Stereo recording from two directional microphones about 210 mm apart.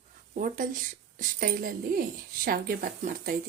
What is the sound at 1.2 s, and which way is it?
A woman's voice, 40° right (ahead or behind).